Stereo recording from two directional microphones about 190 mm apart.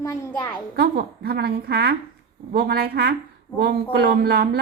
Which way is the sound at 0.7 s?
55° right (ahead or behind).